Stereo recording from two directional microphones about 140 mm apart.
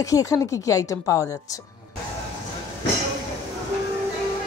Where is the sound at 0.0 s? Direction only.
25° left (ahead or behind).